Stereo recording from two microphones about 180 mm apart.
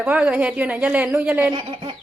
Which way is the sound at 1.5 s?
30° right (ahead or behind).